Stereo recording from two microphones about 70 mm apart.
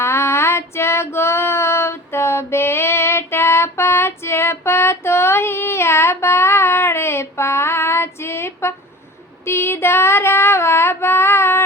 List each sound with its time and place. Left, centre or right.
0.0 s female singing: left